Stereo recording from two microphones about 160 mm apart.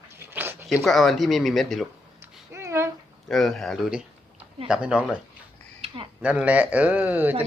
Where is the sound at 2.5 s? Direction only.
15° right (ahead or behind).